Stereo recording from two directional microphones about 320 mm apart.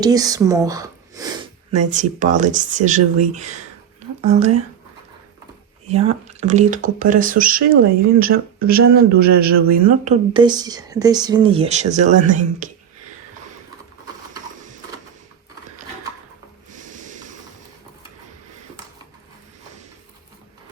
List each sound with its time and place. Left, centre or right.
0.0 s speech: centre
1.7 s speech: right
5.9 s speech: centre
9.6 s speech: centre
16.7 s snort: right